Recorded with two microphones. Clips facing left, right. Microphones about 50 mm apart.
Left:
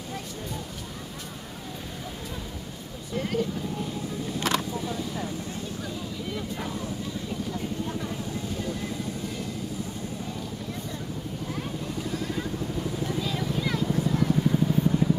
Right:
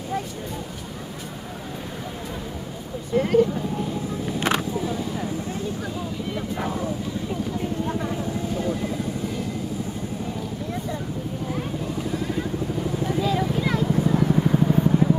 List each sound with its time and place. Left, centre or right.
3.2 s speech: right
4.3 s vehicle: right
4.7 s vehicle: centre
6.3 s a sound: right
7.8 s vehicle: right
8.5 s vehicle: centre
11.5 s vehicle: centre
13.3 s a sound: right
13.8 s vehicle: centre